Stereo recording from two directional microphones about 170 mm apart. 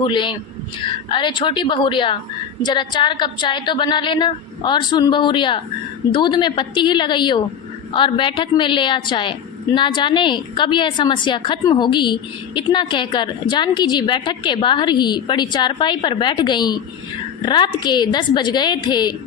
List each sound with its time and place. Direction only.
0.0 s a woman's voice: 30° left (ahead or behind)